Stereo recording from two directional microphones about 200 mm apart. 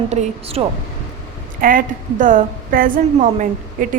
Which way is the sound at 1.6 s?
40° right (ahead or behind).